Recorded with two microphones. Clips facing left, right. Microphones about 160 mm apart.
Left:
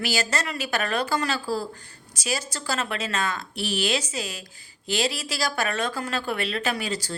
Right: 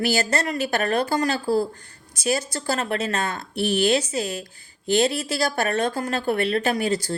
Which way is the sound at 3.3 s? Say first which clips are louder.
Right 5 dB; 55° right (ahead or behind).